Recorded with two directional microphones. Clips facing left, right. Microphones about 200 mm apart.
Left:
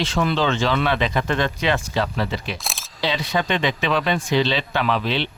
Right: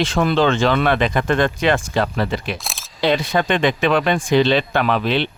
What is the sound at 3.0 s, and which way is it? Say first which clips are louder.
Speech: right 5 dB; 50° right (ahead or behind).